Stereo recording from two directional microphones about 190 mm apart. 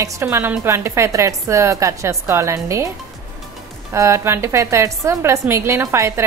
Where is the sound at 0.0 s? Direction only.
15° right (ahead or behind).